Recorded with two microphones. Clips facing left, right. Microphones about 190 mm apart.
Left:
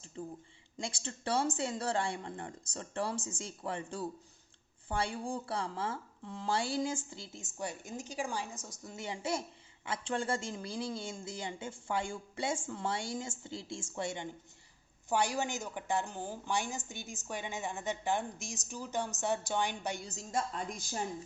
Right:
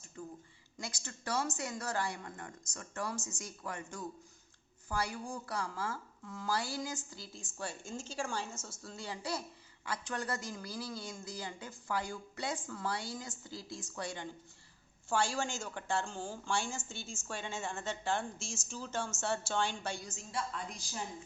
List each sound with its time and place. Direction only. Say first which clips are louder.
0.2 s a woman's voice: left 3 dB; 30° left (ahead or behind)
20.1 s a woman's voice: left 4 dB; 40° left (ahead or behind)